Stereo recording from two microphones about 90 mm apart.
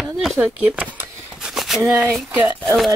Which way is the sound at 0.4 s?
15° right (ahead or behind).